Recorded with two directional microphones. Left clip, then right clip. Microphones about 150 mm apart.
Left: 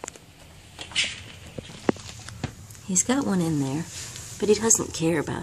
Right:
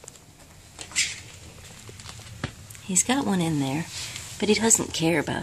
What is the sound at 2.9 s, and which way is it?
Speech, 15° right (ahead or behind).